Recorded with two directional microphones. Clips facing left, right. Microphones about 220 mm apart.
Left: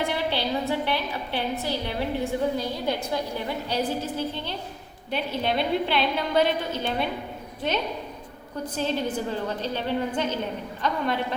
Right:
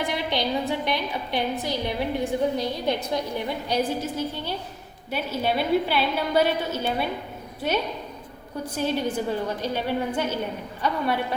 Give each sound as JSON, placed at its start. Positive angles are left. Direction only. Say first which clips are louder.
{"t": 0.3, "sound": "a woman's voice", "louder": "right 1 dB", "side_deg": -15}
{"t": 8.7, "sound": "a woman's voice", "louder": "right 2 dB", "side_deg": -10}